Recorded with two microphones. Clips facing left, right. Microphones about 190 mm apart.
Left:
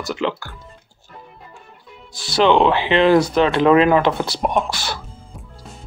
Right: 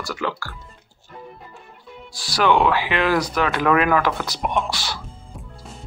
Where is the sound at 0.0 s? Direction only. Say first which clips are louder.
Left 4 dB; 20° left (ahead or behind).